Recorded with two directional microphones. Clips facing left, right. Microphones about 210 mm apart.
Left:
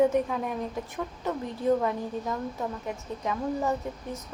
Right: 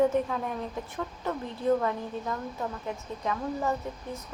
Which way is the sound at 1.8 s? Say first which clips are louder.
Left 2 dB; 15° left (ahead or behind).